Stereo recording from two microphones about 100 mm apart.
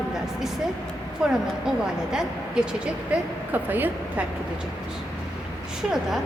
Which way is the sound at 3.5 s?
20° right (ahead or behind).